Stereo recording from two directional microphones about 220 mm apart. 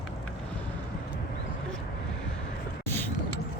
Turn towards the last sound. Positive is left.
turn(degrees=10)  # may be behind; listen again after turning